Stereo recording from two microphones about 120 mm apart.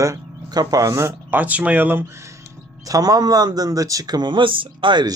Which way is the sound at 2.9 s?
30° right (ahead or behind).